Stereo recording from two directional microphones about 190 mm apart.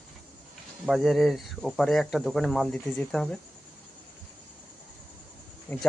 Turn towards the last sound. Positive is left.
turn(degrees=10)  # may be behind; listen again after turning